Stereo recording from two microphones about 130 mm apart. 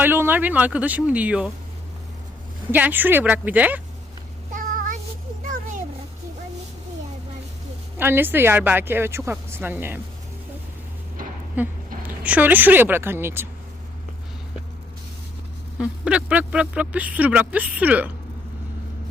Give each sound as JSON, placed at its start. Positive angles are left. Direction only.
{"t": 0.0, "sound": "speech", "side_deg": -15}
{"t": 2.7, "sound": "speech", "side_deg": -15}
{"t": 4.5, "sound": "child singing", "side_deg": -90}
{"t": 7.9, "sound": "speech", "side_deg": -15}
{"t": 11.6, "sound": "speech", "side_deg": -15}
{"t": 15.8, "sound": "speech", "side_deg": -10}